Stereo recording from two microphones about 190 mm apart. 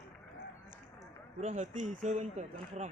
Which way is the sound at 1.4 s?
35° right (ahead or behind).